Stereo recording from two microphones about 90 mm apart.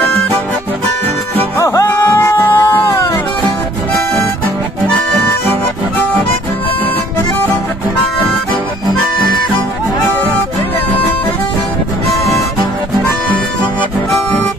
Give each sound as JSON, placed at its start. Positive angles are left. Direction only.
{"t": 1.6, "sound": "music", "side_deg": 35}
{"t": 2.9, "sound": "music", "side_deg": 40}